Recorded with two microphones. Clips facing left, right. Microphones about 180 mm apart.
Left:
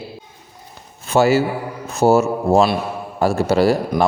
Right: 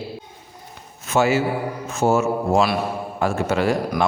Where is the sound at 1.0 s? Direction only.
35° left (ahead or behind).